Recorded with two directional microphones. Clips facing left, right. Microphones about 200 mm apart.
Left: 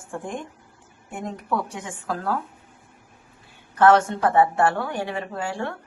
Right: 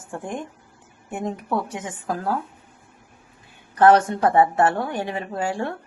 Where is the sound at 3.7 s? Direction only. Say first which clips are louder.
Right 1 dB; 15° right (ahead or behind).